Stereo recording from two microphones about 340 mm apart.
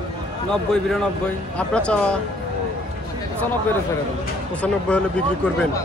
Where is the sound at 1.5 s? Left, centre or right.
Centre.